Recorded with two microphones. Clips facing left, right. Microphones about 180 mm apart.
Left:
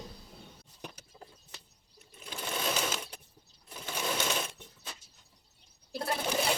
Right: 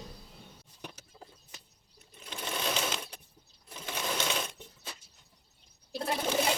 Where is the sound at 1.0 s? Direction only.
10° right (ahead or behind).